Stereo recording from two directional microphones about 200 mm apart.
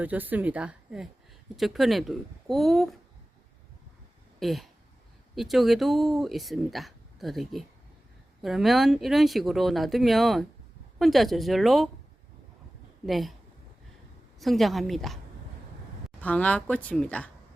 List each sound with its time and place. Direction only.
0.0 s a woman's voice: 10° right (ahead or behind)
4.4 s a sound: centre (ahead or behind)
5.3 s speech: centre (ahead or behind)
13.1 s speech: centre (ahead or behind)
14.3 s speech: centre (ahead or behind)